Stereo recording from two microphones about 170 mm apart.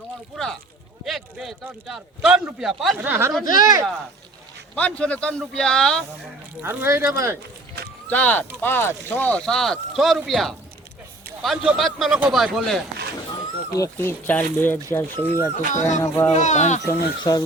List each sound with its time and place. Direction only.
0.3 s a sound: centre (ahead or behind)
1.0 s a man's voice: centre (ahead or behind)
3.0 s speech: 15° right (ahead or behind)
4.7 s speech: 5° left (ahead or behind)
6.6 s speech: 15° right (ahead or behind)
8.1 s speech: 10° left (ahead or behind)
13.7 s speech: 15° left (ahead or behind)
15.7 s speech: 45° left (ahead or behind)
16.0 s speech: 15° left (ahead or behind)
16.3 s speech: 45° left (ahead or behind)
16.8 s speech: 20° left (ahead or behind)